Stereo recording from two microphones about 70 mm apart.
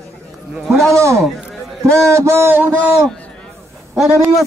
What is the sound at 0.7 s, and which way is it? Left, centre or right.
Speech, centre.